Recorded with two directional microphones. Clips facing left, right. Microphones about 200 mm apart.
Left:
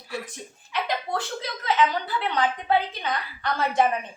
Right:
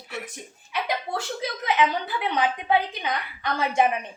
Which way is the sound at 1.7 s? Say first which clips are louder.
Left 1 dB; 15° right (ahead or behind).